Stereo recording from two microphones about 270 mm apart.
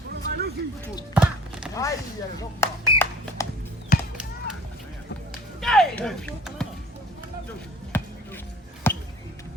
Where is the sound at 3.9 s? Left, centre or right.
Left.